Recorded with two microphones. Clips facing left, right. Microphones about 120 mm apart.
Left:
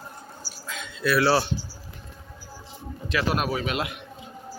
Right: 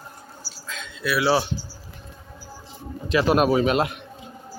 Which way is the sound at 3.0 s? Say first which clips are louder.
Right 7 dB; 25° right (ahead or behind).